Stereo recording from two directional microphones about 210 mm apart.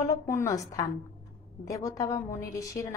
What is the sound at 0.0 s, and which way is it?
A woman's voice, 15° left (ahead or behind).